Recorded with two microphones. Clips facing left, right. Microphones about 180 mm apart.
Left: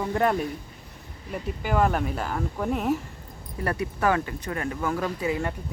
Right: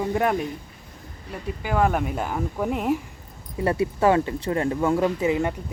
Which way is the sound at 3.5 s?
25° right (ahead or behind).